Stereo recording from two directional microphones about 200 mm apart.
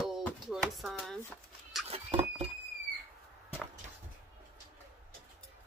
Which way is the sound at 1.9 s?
30° right (ahead or behind).